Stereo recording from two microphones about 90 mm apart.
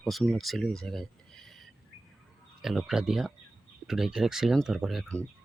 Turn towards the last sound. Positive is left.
turn(degrees=0)  # may be behind; listen again after turning